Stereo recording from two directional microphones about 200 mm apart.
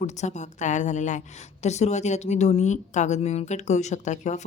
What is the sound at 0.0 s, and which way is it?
A woman's voice, 35° left (ahead or behind).